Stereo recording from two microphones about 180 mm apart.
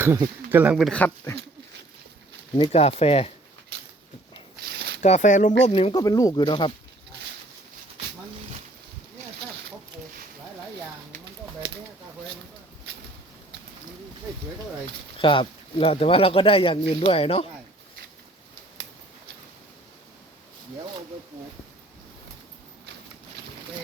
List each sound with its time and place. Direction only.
0.0 s speech: 15° right (ahead or behind)
0.9 s speech: 10° left (ahead or behind)
2.6 s speech: 35° left (ahead or behind)
4.6 s a sound: 65° right (ahead or behind)
5.0 s speech: 40° left (ahead or behind)
5.9 s speech: 20° left (ahead or behind)
15.2 s speech: 30° left (ahead or behind)